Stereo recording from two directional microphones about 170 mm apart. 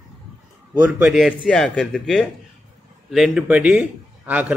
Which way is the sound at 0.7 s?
10° right (ahead or behind).